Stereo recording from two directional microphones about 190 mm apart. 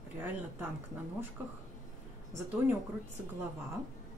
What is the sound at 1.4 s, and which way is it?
Speech, 10° right (ahead or behind).